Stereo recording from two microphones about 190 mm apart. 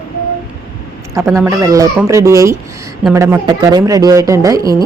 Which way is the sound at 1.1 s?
15° right (ahead or behind).